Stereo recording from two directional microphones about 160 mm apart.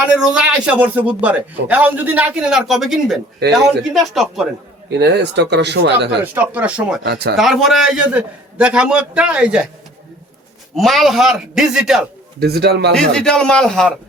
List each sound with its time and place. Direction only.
0.0 s a man's voice: 5° right (ahead or behind)
4.9 s speech: 90° right
6.2 s a man's voice: 10° right (ahead or behind)
7.0 s speech: 85° right
7.3 s a man's voice: centre (ahead or behind)
10.8 s a man's voice: centre (ahead or behind)
12.4 s speech: 90° right
12.9 s a man's voice: 5° left (ahead or behind)